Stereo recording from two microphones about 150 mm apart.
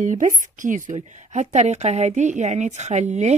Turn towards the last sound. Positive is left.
turn(degrees=-50)  # may be behind; listen again after turning